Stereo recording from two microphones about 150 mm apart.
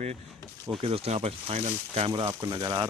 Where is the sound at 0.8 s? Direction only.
40° right (ahead or behind).